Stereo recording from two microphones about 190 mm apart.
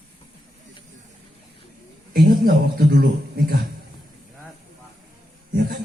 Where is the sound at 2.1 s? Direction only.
50° right (ahead or behind).